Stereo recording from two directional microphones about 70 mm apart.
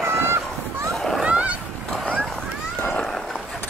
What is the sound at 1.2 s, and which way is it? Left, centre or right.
Boat, centre.